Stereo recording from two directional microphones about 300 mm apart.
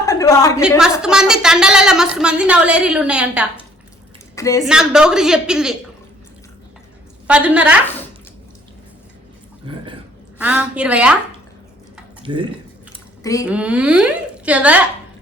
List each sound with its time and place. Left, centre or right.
0.0 s a sound: centre
1.0 s a woman's voice: centre
4.4 s a woman's voice: centre
4.6 s a woman's voice: centre
7.3 s a woman's voice: centre
10.3 s a woman's voice: centre
12.2 s speech: centre
13.4 s a woman's voice: centre